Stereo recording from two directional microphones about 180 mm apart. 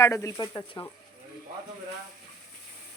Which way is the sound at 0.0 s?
15° left (ahead or behind).